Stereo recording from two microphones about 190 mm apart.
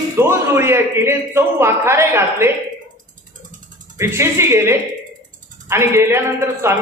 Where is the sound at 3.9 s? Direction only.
15° right (ahead or behind).